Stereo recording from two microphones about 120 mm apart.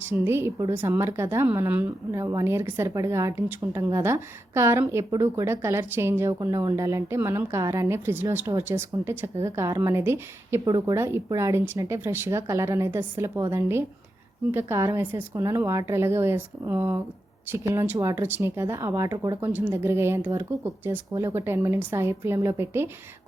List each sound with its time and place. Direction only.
0.0 s a woman's voice: 20° right (ahead or behind)
19.4 s a woman's voice: 20° right (ahead or behind)